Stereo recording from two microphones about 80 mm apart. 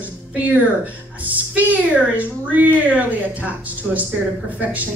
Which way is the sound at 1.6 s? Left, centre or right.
Centre.